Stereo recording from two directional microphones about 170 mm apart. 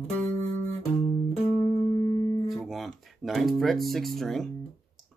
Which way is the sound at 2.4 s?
Centre (ahead or behind).